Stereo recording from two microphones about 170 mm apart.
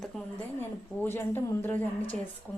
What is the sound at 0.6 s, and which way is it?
A woman's voice, 10° left (ahead or behind).